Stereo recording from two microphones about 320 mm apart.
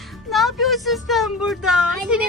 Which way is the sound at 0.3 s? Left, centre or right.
Centre.